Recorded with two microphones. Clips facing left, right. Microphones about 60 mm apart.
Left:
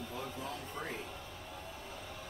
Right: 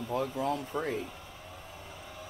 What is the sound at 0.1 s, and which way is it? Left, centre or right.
Speech, right.